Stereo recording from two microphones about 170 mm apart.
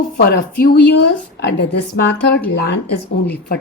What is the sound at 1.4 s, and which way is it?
Speech, 75° left (ahead or behind).